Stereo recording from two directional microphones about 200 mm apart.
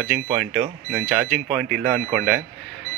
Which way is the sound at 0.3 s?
10° right (ahead or behind).